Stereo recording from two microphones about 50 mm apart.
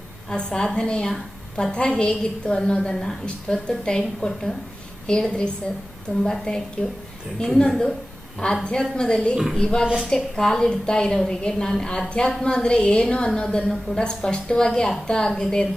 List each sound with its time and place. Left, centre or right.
0.3 s a woman's voice: centre
9.8 s a woman's voice: centre
10.1 s a woman's voice: centre